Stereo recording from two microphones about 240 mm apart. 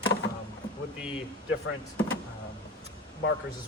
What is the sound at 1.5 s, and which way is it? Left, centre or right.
Speech, left.